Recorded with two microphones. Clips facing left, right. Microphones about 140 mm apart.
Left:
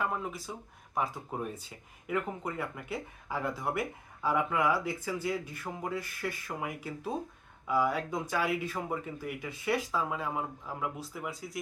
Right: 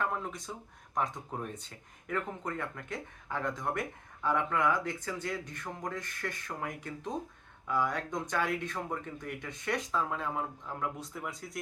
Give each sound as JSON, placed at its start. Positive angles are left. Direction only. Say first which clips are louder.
{"t": 0.0, "sound": "speech", "louder": "left 1 dB", "side_deg": 5}